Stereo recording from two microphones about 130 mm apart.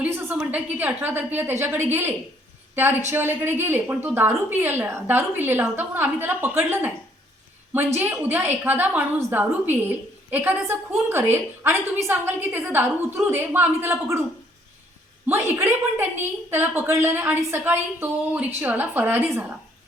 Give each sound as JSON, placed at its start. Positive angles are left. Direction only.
{"t": 0.0, "sound": "a woman's voice", "side_deg": -15}
{"t": 7.9, "sound": "a woman's voice", "side_deg": -15}
{"t": 15.3, "sound": "a woman's voice", "side_deg": -20}